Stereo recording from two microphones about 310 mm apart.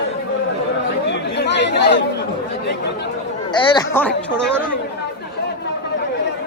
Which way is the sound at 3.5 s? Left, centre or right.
Centre.